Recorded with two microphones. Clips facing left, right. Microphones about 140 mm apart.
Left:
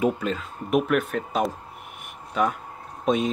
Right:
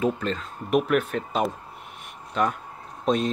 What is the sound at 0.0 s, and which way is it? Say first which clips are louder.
Speech: left 1 dB; 5° left (ahead or behind).